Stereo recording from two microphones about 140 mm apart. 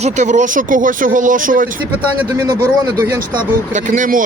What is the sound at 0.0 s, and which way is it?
Speech, 60° right (ahead or behind).